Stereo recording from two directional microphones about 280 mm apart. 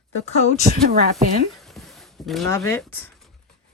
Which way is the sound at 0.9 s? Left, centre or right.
Right.